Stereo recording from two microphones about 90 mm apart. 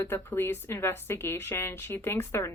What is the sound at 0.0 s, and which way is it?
Speech, 25° left (ahead or behind).